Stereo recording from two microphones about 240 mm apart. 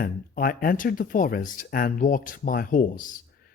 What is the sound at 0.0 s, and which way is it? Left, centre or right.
Speech, left.